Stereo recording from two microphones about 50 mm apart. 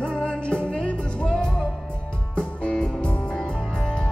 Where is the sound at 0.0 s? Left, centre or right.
Centre.